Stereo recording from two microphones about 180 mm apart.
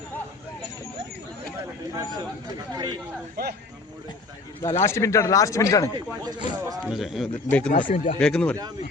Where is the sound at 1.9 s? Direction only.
20° right (ahead or behind).